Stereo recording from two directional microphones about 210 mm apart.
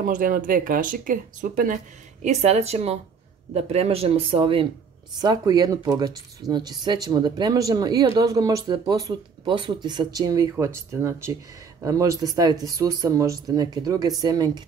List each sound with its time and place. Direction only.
0.0 s speech: 40° right (ahead or behind); by 14.6 s 15° right (ahead or behind)